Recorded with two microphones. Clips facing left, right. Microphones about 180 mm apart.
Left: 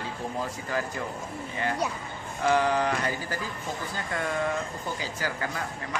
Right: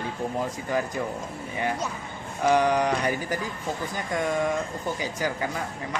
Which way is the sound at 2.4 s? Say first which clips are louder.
Right 3 dB; 15° right (ahead or behind).